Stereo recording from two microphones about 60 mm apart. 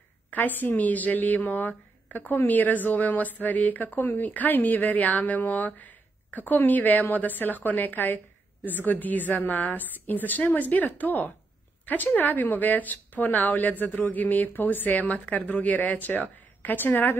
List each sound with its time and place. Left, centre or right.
0.3 s a woman's voice: left